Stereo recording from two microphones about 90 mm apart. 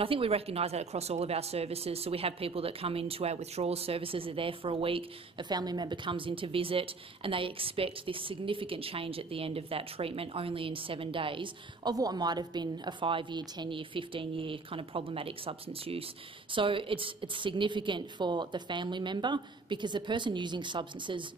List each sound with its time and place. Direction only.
0.0 s speech: 90° right
1.8 s a woman's voice: 90° right
5.5 s a woman's voice: 50° right (ahead or behind); by 11.9 s 70° right (ahead or behind)
11.9 s a woman's voice: 45° right (ahead or behind); by 16.1 s 90° right
16.5 s a woman's voice: 70° right (ahead or behind)